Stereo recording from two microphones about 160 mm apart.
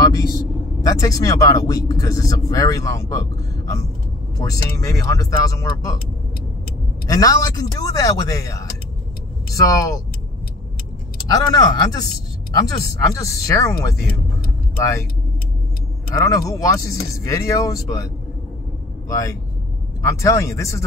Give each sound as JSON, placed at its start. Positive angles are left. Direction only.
{"t": 0.0, "sound": "speech", "side_deg": 20}
{"t": 7.1, "sound": "speech", "side_deg": 25}
{"t": 11.2, "sound": "speech", "side_deg": 20}
{"t": 16.2, "sound": "speech", "side_deg": 20}
{"t": 19.0, "sound": "speech", "side_deg": 20}